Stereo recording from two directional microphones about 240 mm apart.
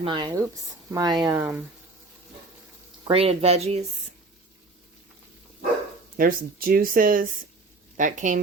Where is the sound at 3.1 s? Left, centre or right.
Right.